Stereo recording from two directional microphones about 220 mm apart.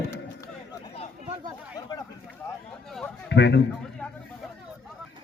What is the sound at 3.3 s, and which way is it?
Speech, 50° left (ahead or behind).